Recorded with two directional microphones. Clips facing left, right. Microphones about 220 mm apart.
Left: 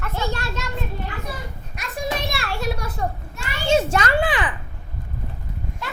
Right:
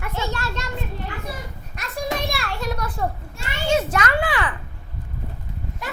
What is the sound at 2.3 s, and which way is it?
Speech, 5° left (ahead or behind).